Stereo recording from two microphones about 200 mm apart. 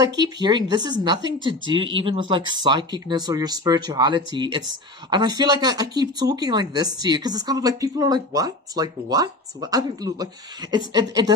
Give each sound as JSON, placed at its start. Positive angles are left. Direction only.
{"t": 0.4, "sound": "speech", "side_deg": -20}